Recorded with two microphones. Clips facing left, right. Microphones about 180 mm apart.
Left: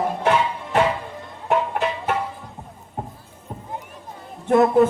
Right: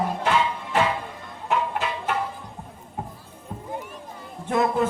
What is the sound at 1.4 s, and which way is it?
Music, 50° left (ahead or behind).